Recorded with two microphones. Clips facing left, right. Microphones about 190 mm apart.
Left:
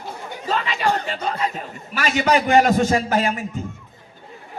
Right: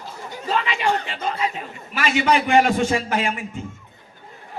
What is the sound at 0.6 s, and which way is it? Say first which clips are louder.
A man's voice: left 1 dB; 40° left (ahead or behind).